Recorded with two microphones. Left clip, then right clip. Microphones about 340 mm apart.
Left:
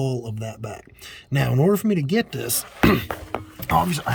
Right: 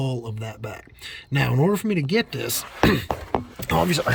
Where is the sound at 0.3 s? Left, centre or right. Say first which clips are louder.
Left 1 dB; centre.